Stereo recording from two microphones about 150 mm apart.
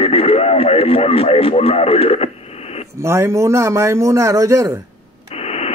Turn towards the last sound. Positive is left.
turn(degrees=45)  # may be behind; listen again after turning